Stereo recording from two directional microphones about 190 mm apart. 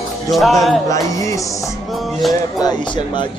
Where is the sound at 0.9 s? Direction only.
15° left (ahead or behind).